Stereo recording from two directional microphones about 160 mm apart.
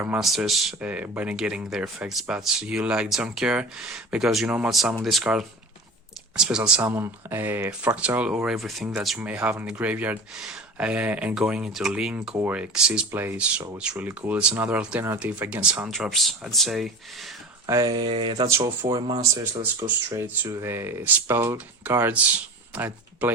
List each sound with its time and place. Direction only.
0.0 s speech: 5° right (ahead or behind)
17.7 s speech: 25° right (ahead or behind)
20.1 s speech: 10° right (ahead or behind)